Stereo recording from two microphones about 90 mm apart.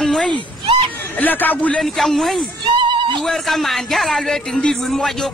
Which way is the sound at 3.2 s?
Centre (ahead or behind).